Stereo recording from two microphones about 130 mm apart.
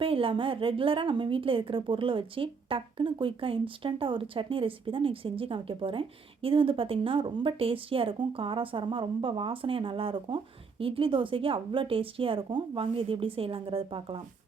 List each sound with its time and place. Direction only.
0.0 s a woman's voice: 45° right (ahead or behind)